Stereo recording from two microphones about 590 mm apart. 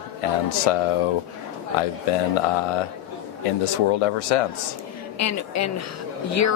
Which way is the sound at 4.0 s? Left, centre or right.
Left.